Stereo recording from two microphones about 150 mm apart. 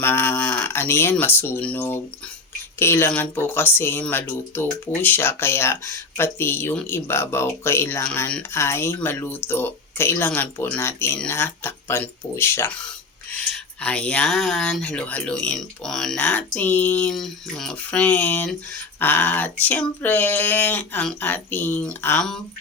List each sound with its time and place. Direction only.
0.0 s speech: 15° left (ahead or behind)